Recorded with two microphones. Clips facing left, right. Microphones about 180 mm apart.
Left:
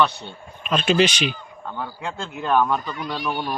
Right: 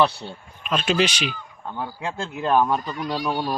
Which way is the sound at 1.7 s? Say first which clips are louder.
Right 1 dB; 20° right (ahead or behind).